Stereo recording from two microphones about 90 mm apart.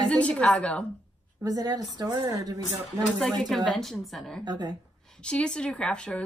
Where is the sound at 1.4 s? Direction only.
45° right (ahead or behind).